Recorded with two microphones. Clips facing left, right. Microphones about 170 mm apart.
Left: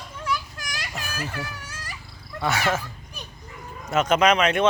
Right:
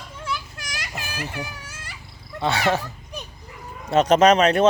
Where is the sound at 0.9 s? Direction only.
20° right (ahead or behind).